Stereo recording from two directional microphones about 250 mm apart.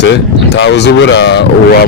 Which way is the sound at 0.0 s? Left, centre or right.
Left.